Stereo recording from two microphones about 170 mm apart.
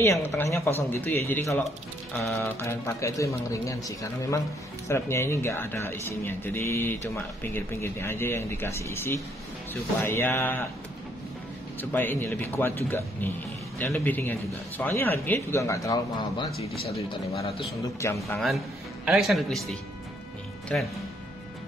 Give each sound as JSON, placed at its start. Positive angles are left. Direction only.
{"t": 0.0, "sound": "a woman's voice", "side_deg": 15}
{"t": 11.8, "sound": "speech", "side_deg": 10}
{"t": 18.0, "sound": "speech", "side_deg": 15}
{"t": 19.0, "sound": "speech", "side_deg": 0}